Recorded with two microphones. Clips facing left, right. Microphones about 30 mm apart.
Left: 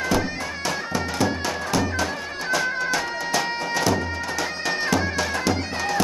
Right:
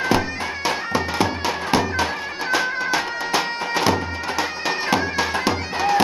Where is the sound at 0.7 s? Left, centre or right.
Right.